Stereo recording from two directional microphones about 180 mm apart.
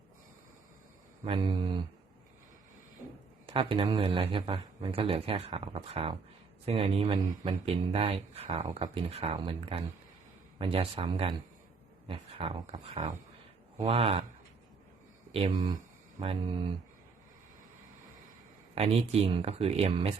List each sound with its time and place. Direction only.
1.2 s mantra: 25° right (ahead or behind)
3.4 s speech: 30° right (ahead or behind)
15.3 s mantra: 30° right (ahead or behind)
18.7 s speech: 35° right (ahead or behind)